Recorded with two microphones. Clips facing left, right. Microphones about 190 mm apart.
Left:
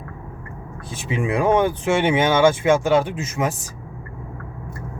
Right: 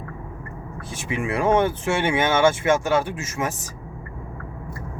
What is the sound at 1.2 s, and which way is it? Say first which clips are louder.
Speech: left 2 dB; 15° left (ahead or behind).